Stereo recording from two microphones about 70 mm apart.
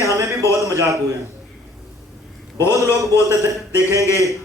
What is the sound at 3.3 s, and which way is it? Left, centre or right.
A man's voice, right.